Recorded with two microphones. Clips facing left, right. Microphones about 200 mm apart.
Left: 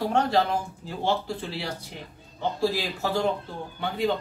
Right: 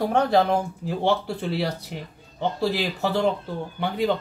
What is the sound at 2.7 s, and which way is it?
Speech, 65° right (ahead or behind).